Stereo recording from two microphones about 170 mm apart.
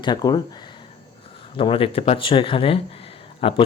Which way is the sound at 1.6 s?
30° left (ahead or behind).